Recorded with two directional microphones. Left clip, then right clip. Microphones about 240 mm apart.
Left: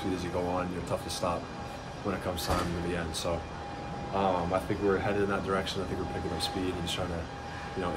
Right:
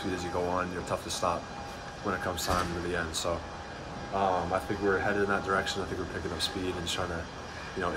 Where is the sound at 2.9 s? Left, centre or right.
Centre.